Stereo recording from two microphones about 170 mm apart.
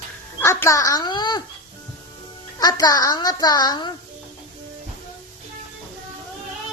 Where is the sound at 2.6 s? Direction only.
25° left (ahead or behind).